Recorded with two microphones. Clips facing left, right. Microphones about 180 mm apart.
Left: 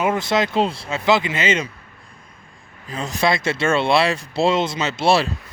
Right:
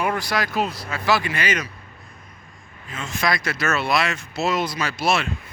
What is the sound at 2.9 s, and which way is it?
Speech, 35° left (ahead or behind).